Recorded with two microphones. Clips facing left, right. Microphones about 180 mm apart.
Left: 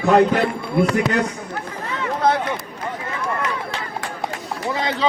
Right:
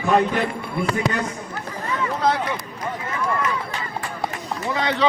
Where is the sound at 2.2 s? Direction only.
55° left (ahead or behind).